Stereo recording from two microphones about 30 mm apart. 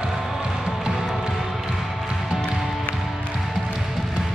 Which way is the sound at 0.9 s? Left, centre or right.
Centre.